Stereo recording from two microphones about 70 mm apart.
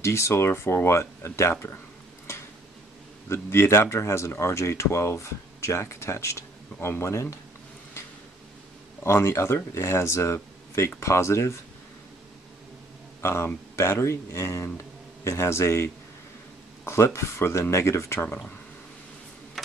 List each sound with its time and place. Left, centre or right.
0.0 s speech: left
3.3 s speech: left
9.0 s speech: left
13.2 s speech: left